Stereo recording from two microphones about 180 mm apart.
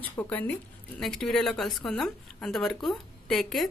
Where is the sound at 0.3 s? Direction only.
10° left (ahead or behind).